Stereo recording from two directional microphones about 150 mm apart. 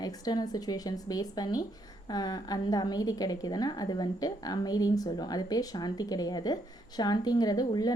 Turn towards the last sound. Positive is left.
turn(degrees=25)  # may be behind; listen again after turning